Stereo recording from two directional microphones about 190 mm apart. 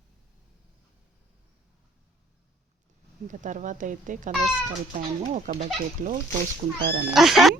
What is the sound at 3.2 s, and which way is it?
Speech, 40° right (ahead or behind).